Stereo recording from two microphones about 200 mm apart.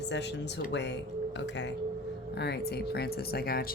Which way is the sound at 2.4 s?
55° left (ahead or behind).